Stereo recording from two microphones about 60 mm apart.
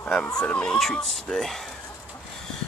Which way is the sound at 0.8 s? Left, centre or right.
Centre.